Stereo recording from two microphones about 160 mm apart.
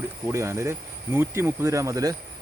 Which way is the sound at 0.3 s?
20° right (ahead or behind).